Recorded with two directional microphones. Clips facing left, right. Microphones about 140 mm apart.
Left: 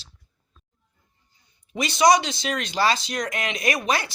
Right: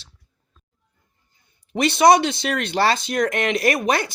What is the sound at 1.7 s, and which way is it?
Speech, 60° right (ahead or behind).